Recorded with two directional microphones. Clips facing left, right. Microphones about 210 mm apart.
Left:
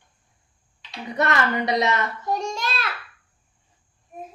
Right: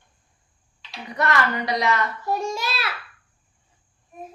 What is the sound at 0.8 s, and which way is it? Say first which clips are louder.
Speech: left 2 dB; 20° left (ahead or behind).